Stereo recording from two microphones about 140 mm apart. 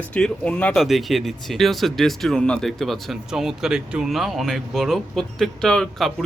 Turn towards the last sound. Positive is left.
turn(degrees=5)  # may be behind; listen again after turning